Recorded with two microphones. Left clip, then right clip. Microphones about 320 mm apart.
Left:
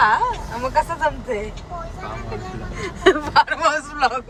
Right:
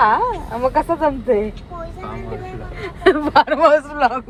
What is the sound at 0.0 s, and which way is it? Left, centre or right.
A woman's voice, centre.